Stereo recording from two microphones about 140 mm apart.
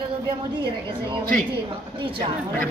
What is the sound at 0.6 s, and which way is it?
A woman's voice, 35° right (ahead or behind).